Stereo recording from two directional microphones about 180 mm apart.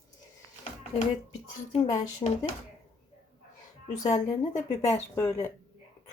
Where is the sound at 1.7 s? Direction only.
40° left (ahead or behind).